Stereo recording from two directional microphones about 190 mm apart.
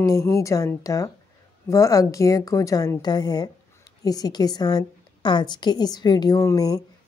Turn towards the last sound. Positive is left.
turn(degrees=20)  # may be behind; listen again after turning